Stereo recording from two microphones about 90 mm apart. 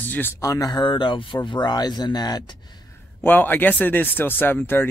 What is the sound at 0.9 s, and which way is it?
Speech, 65° left (ahead or behind).